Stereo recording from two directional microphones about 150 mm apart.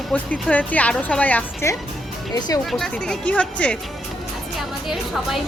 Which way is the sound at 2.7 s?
5° left (ahead or behind).